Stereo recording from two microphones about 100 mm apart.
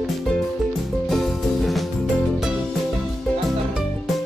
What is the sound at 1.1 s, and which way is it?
Music, centre (ahead or behind).